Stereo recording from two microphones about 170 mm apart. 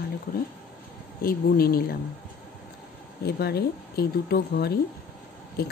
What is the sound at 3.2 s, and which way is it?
Speech, 65° left (ahead or behind).